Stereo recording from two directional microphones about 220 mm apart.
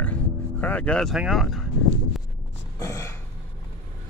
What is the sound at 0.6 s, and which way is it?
Speech, 5° left (ahead or behind).